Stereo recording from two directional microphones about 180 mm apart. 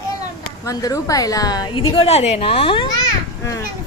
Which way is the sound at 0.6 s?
20° left (ahead or behind).